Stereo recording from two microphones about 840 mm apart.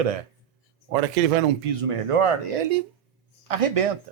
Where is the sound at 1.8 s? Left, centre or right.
Right.